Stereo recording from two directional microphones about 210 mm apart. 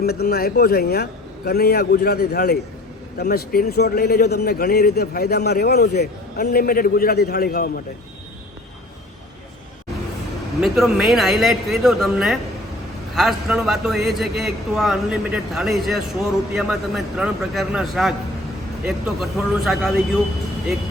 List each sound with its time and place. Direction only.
0.0 s speech: 50° left (ahead or behind)
10.6 s a man's voice: centre (ahead or behind)